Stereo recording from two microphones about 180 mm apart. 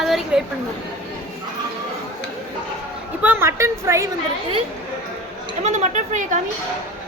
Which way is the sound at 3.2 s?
10° right (ahead or behind).